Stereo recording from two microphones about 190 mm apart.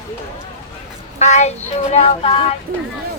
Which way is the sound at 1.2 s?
35° left (ahead or behind).